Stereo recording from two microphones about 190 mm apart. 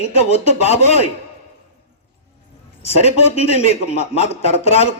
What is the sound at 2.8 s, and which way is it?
A man's voice, 35° left (ahead or behind).